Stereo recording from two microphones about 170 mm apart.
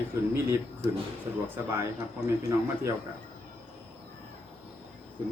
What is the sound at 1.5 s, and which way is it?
Speech, 15° right (ahead or behind).